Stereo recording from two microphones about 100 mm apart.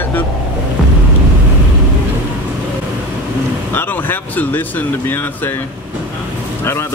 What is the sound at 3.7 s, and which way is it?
Speech, 20° left (ahead or behind).